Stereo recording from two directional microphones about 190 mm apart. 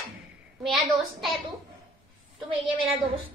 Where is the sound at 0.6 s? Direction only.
Centre (ahead or behind).